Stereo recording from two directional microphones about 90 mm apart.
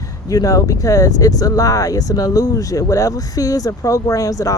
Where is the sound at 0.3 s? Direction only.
40° left (ahead or behind).